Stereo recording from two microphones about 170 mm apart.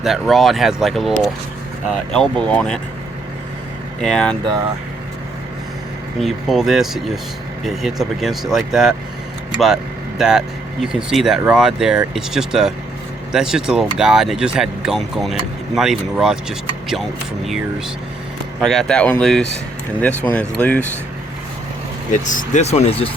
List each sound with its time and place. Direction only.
0.0 s speech: centre (ahead or behind)
4.0 s speech: 5° left (ahead or behind)
6.1 s speech: centre (ahead or behind)
18.6 s speech: centre (ahead or behind)
22.2 s speech: 50° left (ahead or behind)